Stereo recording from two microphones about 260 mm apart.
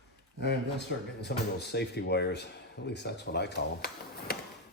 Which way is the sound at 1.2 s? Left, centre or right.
Left.